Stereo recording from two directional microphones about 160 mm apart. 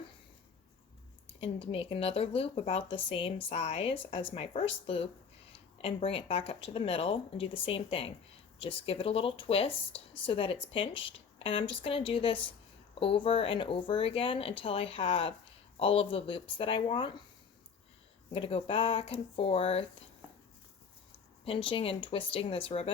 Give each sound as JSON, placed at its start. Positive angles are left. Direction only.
{"t": 1.4, "sound": "speech", "side_deg": 35}
{"t": 18.3, "sound": "speech", "side_deg": 35}
{"t": 21.4, "sound": "speech", "side_deg": 35}